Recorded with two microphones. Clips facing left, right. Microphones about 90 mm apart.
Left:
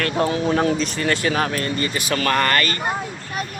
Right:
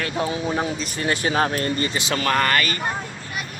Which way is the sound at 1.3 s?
30° right (ahead or behind).